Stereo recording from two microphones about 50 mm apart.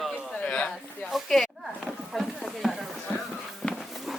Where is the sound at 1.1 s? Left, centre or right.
Centre.